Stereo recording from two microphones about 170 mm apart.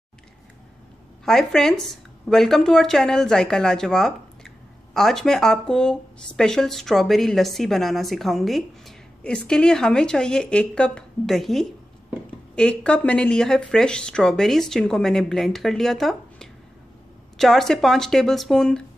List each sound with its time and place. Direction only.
1.2 s speech: 5° left (ahead or behind)